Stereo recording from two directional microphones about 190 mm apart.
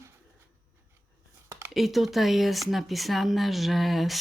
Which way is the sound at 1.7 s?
Centre (ahead or behind).